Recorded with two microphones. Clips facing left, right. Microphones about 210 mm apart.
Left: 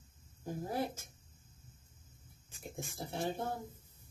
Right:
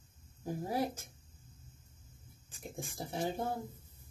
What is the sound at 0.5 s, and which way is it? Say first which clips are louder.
Speech: right 2 dB; 10° right (ahead or behind).